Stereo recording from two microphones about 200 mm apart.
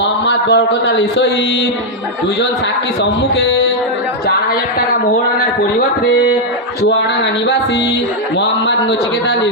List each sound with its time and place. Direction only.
0.0 s a man's voice: 60° left (ahead or behind)
8.4 s a man's voice: 60° left (ahead or behind)